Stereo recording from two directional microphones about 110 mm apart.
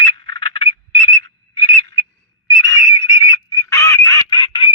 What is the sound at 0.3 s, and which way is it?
Whistle, 50° left (ahead or behind).